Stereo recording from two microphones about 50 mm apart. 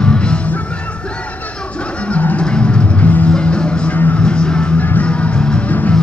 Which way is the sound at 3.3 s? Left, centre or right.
Centre.